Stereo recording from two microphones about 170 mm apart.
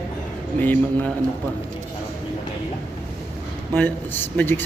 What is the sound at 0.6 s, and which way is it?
Speech, 10° left (ahead or behind).